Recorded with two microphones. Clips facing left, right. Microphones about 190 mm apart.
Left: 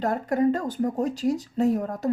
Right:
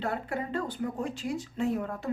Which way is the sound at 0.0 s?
40° left (ahead or behind).